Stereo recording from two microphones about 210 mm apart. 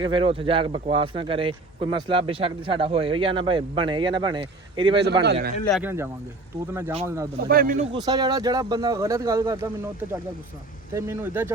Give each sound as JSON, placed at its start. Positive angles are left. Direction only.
{"t": 0.0, "sound": "a man's voice", "side_deg": -25}
{"t": 5.2, "sound": "speech", "side_deg": -50}
{"t": 5.7, "sound": "speech", "side_deg": -10}
{"t": 7.4, "sound": "speech", "side_deg": -45}
{"t": 7.9, "sound": "speech", "side_deg": -20}